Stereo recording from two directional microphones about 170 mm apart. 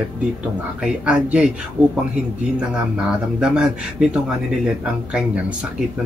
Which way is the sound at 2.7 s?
5° right (ahead or behind).